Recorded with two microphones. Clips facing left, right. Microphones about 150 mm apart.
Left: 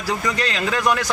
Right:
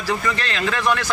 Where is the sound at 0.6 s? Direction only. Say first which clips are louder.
Even; 10° left (ahead or behind).